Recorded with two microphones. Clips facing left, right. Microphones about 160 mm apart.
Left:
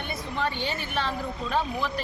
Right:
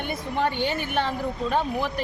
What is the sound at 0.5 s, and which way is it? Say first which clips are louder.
Speech: right 5 dB; 55° right (ahead or behind).